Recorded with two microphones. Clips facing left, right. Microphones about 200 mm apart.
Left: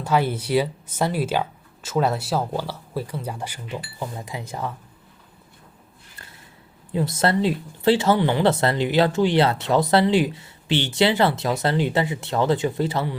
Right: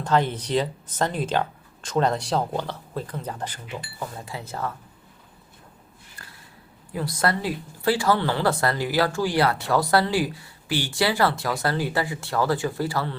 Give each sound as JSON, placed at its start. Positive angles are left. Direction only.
{"t": 0.0, "sound": "speech", "side_deg": 10}
{"t": 6.9, "sound": "speech", "side_deg": 25}